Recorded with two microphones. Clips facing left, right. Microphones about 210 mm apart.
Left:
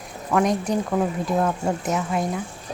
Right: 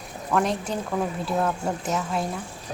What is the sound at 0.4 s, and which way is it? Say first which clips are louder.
Speech: left 5 dB; 15° left (ahead or behind).